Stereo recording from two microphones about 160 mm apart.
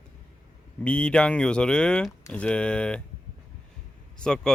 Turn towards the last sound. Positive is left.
turn(degrees=5)  # may be behind; listen again after turning